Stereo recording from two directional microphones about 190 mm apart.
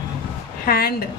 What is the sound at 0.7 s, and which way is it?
Speech, 50° left (ahead or behind).